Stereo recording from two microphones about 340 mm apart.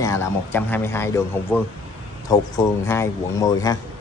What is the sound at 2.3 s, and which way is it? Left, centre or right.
Speech, centre.